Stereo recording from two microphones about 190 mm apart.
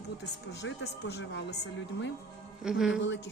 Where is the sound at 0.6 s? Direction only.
65° left (ahead or behind).